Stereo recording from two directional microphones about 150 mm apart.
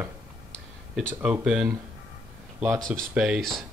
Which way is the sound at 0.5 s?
10° left (ahead or behind).